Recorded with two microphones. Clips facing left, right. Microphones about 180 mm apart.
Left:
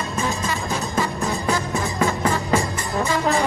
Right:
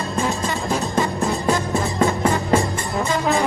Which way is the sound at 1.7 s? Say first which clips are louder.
Right 3 dB; 35° right (ahead or behind).